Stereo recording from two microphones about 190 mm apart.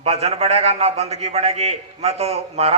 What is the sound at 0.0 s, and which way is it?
A man's voice, 35° right (ahead or behind).